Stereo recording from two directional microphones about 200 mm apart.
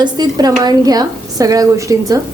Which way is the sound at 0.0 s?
20° right (ahead or behind).